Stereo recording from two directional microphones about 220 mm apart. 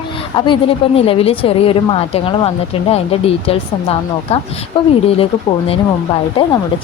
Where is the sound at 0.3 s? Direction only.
20° left (ahead or behind).